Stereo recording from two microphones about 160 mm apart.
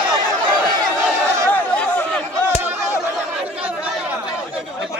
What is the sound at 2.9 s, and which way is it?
Chatter, 15° left (ahead or behind).